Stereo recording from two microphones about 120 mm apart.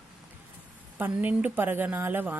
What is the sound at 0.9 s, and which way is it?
A woman's voice, 15° right (ahead or behind).